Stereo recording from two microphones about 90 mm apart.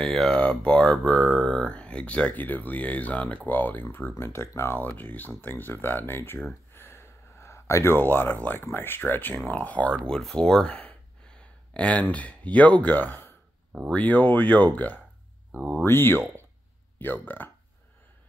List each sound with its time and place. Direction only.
0.0 s speech: 5° left (ahead or behind); by 14.7 s 20° left (ahead or behind)
15.8 s speech: 25° left (ahead or behind)